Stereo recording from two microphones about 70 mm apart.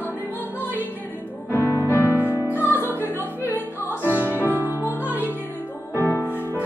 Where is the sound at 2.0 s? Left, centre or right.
Right.